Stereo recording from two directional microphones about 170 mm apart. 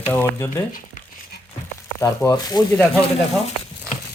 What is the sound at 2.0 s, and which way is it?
Speech, 20° left (ahead or behind).